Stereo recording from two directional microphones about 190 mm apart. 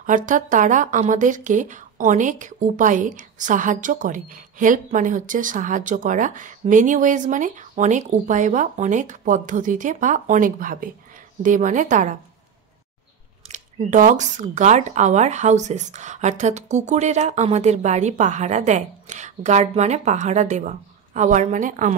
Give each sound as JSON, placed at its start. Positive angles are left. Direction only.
{"t": 0.0, "sound": "speech", "side_deg": -45}
{"t": 13.5, "sound": "speech", "side_deg": -40}